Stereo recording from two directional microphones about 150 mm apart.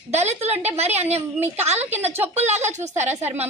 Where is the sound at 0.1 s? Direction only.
45° right (ahead or behind).